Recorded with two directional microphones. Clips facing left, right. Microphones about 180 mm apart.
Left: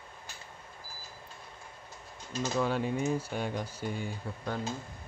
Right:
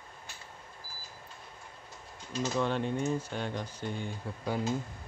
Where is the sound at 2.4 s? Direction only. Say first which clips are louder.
Even; 5° left (ahead or behind).